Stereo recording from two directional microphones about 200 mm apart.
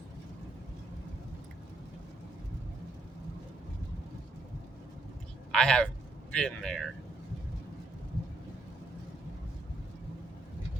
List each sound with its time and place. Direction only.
5.5 s a man's voice: 5° left (ahead or behind)